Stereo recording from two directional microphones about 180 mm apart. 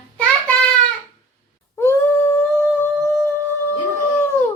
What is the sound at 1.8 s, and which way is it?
Humming, 10° left (ahead or behind).